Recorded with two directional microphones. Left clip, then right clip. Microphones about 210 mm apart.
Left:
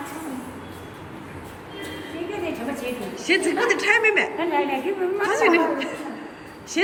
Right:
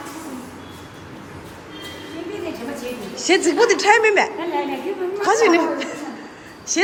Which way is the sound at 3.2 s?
5° right (ahead or behind).